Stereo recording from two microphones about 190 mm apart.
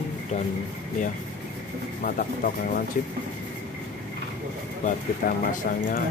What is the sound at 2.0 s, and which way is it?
Speech, 50° left (ahead or behind).